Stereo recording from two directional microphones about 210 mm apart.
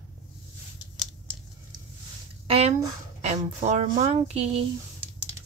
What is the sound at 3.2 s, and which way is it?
Speech, 30° right (ahead or behind).